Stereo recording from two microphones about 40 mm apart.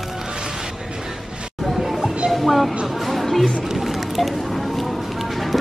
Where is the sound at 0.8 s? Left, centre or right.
Right.